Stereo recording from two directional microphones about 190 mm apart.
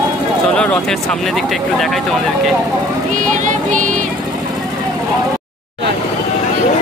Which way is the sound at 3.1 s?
40° right (ahead or behind).